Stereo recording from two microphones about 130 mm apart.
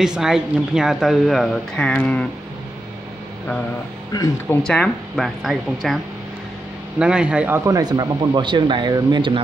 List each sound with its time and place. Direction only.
0.0 s speech: 5° right (ahead or behind)
4.1 s speech: 30° left (ahead or behind)
4.6 s speech: 5° left (ahead or behind)
7.0 s speech: 5° right (ahead or behind); by 9.4 s 40° right (ahead or behind)